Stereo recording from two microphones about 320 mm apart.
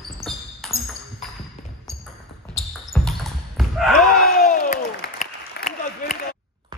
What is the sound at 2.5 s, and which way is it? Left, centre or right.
Basketball bounce, centre.